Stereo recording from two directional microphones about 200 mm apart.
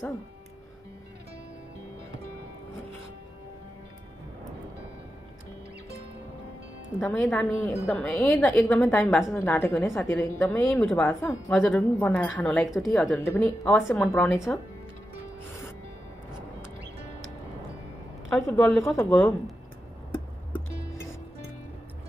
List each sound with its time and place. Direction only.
7.0 s a woman's voice: 5° left (ahead or behind)
11.1 s speech: 15° left (ahead or behind)
11.5 s a woman's voice: centre (ahead or behind)
18.3 s a woman's voice: centre (ahead or behind)